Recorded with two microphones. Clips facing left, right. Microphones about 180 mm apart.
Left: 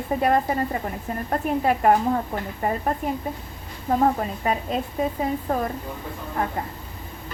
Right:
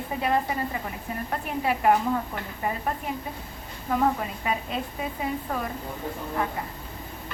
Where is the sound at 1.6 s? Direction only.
45° left (ahead or behind).